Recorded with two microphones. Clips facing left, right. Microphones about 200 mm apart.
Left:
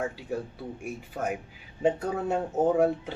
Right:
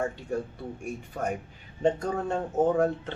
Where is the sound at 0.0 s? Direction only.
5° left (ahead or behind).